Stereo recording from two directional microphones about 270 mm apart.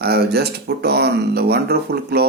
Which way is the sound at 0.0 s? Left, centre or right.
Right.